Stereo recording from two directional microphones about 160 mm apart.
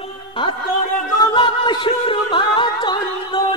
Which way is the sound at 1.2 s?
30° left (ahead or behind).